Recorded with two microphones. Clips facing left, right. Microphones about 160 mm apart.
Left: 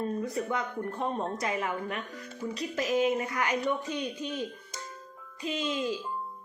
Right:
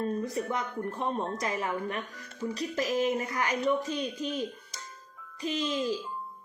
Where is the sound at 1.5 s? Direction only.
35° right (ahead or behind).